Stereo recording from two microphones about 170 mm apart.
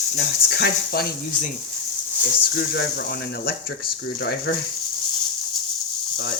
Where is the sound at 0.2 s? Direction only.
70° left (ahead or behind).